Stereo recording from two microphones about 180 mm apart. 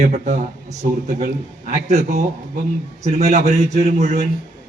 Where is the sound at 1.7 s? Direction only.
40° right (ahead or behind).